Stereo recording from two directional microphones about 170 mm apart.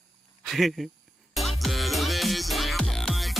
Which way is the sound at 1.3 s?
Centre (ahead or behind).